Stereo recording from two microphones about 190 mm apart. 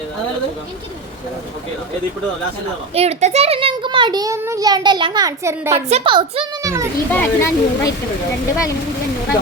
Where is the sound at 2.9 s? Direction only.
35° right (ahead or behind); by 5.7 s 15° right (ahead or behind).